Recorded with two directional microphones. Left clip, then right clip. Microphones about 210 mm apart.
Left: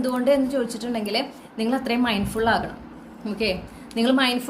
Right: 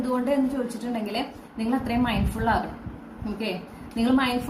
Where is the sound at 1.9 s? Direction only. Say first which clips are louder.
Left 3 dB; 45° left (ahead or behind).